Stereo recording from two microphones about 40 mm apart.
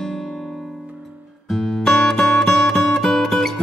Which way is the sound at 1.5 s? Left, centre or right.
Centre.